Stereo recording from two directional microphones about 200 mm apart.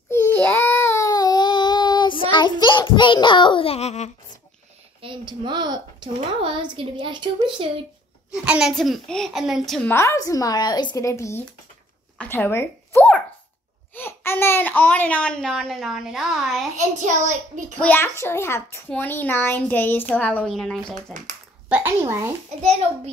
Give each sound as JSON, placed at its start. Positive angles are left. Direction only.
{"t": 0.1, "sound": "child singing", "side_deg": 10}
{"t": 5.0, "sound": "speech", "side_deg": -25}
{"t": 8.3, "sound": "speech", "side_deg": -5}
{"t": 9.8, "sound": "a child's voice", "side_deg": 15}
{"t": 16.7, "sound": "a child's voice", "side_deg": -40}
{"t": 17.7, "sound": "a child's voice", "side_deg": 10}
{"t": 21.6, "sound": "speech", "side_deg": -10}